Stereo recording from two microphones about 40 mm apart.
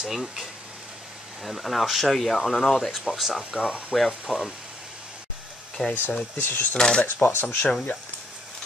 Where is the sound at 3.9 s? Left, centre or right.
Centre.